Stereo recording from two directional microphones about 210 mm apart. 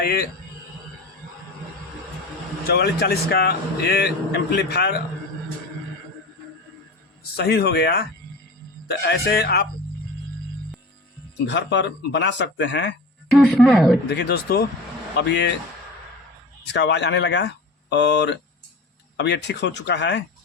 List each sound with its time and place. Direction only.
0.0 s speech: 50° left (ahead or behind)
2.6 s speech: 50° left (ahead or behind)
7.3 s speech: 50° left (ahead or behind)
11.4 s speech: 55° left (ahead or behind)
13.3 s speech: 5° left (ahead or behind)
14.1 s speech: 50° left (ahead or behind)
16.6 s speech: 55° left (ahead or behind)